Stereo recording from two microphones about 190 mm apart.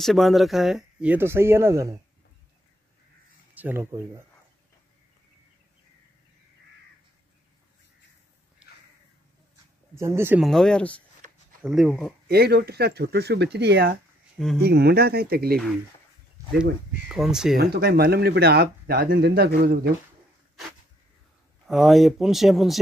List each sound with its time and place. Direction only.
0.0 s speech: centre (ahead or behind)
3.5 s speech: 10° right (ahead or behind)
9.9 s speech: 15° right (ahead or behind)
10.4 s speech: 5° left (ahead or behind)
12.3 s speech: 60° right (ahead or behind)
17.1 s speech: 5° right (ahead or behind)
17.6 s speech: 55° right (ahead or behind)
21.6 s speech: centre (ahead or behind)